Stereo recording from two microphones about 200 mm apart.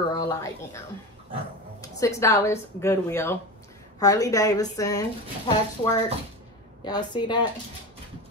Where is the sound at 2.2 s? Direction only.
15° left (ahead or behind).